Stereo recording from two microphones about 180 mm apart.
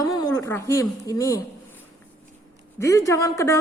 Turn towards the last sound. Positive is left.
turn(degrees=15)  # may be behind; listen again after turning